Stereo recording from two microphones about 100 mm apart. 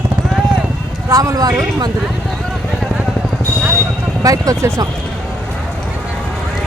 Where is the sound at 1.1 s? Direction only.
35° right (ahead or behind).